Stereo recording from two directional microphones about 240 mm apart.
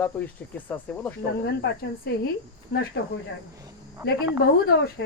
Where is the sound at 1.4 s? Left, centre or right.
Left.